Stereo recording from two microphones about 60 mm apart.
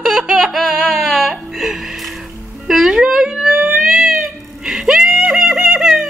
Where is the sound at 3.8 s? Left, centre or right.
Centre.